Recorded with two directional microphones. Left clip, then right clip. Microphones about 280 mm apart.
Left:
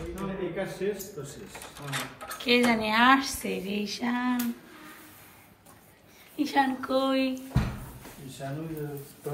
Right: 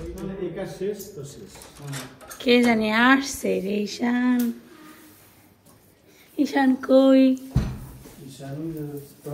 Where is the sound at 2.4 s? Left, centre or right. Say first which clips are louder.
Right 5 dB; centre.